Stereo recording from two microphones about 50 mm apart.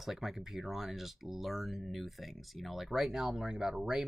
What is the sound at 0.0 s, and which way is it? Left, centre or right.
Speech, centre.